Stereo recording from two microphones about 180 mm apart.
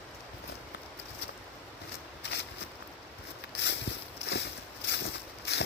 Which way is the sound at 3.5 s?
75° left (ahead or behind).